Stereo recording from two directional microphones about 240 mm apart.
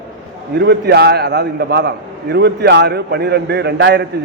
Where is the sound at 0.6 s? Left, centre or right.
Right.